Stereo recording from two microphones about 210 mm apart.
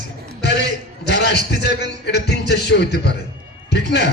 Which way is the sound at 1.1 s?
55° left (ahead or behind).